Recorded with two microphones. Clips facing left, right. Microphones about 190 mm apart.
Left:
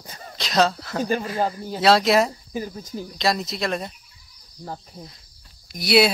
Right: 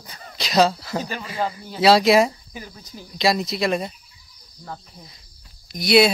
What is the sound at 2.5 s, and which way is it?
Speech, 45° left (ahead or behind).